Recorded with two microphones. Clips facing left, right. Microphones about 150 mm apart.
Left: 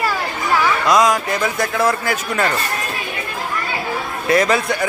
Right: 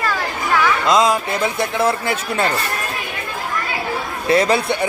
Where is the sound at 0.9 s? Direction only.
25° right (ahead or behind).